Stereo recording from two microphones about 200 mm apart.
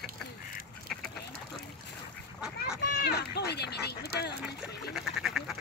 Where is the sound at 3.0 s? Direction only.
55° left (ahead or behind).